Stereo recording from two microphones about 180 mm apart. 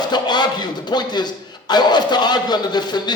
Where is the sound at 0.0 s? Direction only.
25° left (ahead or behind).